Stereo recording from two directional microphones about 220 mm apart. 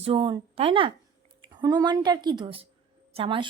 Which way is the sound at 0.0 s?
25° right (ahead or behind).